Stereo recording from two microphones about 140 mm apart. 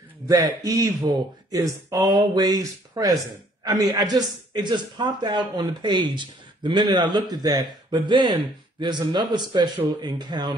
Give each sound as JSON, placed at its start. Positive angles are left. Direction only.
{"t": 0.7, "sound": "a man's voice", "side_deg": -25}